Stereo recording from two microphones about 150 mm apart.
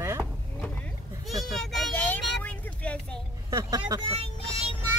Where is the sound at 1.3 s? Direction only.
Centre (ahead or behind).